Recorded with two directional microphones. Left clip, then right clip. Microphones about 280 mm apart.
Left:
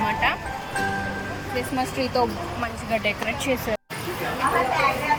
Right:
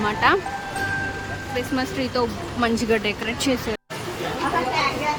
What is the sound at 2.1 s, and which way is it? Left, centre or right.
Speech, right.